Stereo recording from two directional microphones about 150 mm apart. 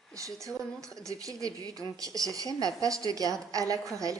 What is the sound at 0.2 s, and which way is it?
A woman's voice, 20° right (ahead or behind).